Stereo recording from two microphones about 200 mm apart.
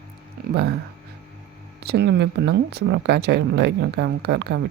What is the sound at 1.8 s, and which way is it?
Speech, 55° right (ahead or behind).